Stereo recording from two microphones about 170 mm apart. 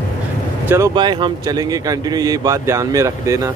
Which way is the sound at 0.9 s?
25° right (ahead or behind).